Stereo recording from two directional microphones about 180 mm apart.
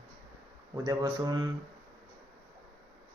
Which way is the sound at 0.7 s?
20° right (ahead or behind).